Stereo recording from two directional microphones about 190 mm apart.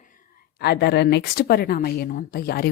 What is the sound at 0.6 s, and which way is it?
Speech, 60° left (ahead or behind).